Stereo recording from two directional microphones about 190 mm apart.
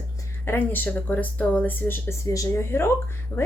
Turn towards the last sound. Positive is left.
turn(degrees=15)  # may be behind; listen again after turning